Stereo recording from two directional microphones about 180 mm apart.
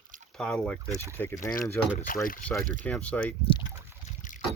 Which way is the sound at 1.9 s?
50° left (ahead or behind).